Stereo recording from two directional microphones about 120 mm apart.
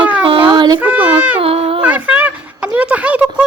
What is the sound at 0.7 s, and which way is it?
Speech, 15° right (ahead or behind).